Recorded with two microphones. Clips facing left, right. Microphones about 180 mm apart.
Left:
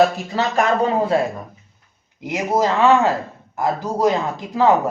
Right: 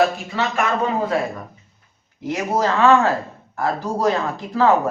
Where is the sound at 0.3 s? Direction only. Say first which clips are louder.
Left 2 dB; 40° left (ahead or behind).